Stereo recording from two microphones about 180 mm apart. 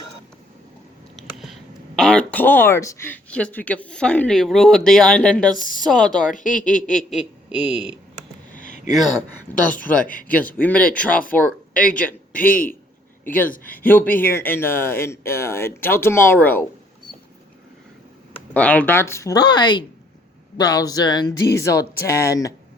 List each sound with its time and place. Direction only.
1.1 s speech: centre (ahead or behind)
6.3 s speech: 45° left (ahead or behind)
6.9 s speech: 5° right (ahead or behind)
8.5 s a sound: 45° left (ahead or behind)
8.9 s speech: centre (ahead or behind)
18.5 s speech: 10° left (ahead or behind)